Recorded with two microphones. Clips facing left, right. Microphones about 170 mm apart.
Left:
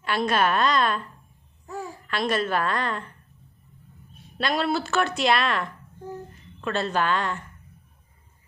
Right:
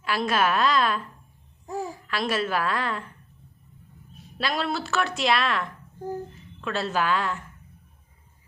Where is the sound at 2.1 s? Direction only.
5° right (ahead or behind).